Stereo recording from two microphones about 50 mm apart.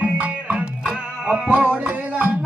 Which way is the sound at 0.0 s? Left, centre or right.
Right.